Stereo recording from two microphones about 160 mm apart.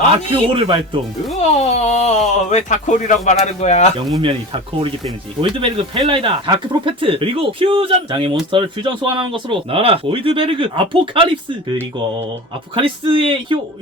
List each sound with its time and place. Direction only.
0.3 s speech: 35° right (ahead or behind)
1.4 s a man's voice: 45° left (ahead or behind)
4.2 s speech: 35° right (ahead or behind)